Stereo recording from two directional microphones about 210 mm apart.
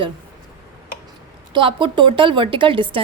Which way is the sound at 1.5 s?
25° right (ahead or behind).